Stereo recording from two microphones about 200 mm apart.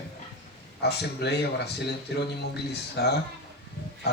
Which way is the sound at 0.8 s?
55° left (ahead or behind).